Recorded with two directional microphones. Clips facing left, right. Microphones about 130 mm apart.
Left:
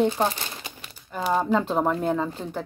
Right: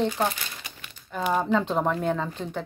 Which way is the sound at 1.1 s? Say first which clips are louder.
Left 1 dB; 5° left (ahead or behind).